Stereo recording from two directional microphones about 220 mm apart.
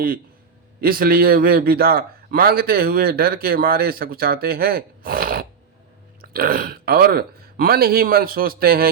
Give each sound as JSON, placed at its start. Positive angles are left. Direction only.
{"t": 0.8, "sound": "a man's voice", "side_deg": -40}